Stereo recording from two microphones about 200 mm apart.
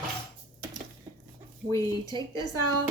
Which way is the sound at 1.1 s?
15° right (ahead or behind).